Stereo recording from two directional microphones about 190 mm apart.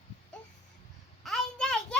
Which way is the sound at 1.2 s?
5° left (ahead or behind).